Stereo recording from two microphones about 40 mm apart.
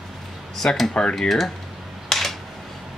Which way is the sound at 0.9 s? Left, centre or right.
Left.